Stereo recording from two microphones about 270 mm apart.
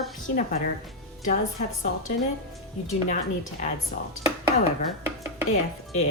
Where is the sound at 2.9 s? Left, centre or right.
Left.